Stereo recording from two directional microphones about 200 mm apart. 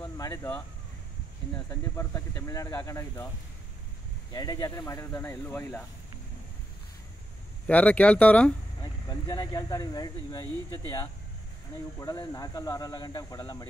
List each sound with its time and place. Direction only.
0.0 s speech: 15° left (ahead or behind)
1.7 s speech: 15° left (ahead or behind)
4.3 s speech: 20° left (ahead or behind)
7.6 s speech: 5° left (ahead or behind)
8.8 s speech: 20° left (ahead or behind)
12.0 s speech: 15° left (ahead or behind)